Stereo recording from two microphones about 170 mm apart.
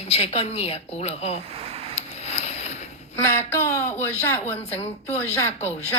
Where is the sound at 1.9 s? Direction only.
40° left (ahead or behind).